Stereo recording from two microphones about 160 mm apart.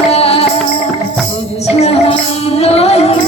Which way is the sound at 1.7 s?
40° left (ahead or behind).